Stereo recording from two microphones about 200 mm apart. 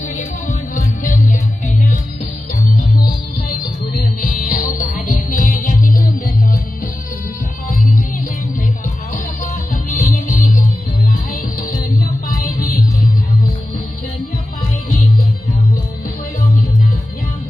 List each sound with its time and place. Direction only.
0.2 s music: 40° left (ahead or behind)
3.6 s music: 45° left (ahead or behind)
9.9 s music: 45° left (ahead or behind)